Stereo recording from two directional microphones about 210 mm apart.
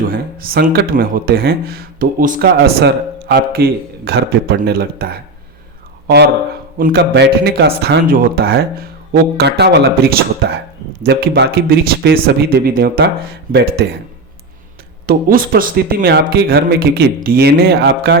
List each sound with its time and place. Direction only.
0.1 s speech: 45° right (ahead or behind)
2.6 s speech: 55° right (ahead or behind)
15.0 s speech: 40° right (ahead or behind)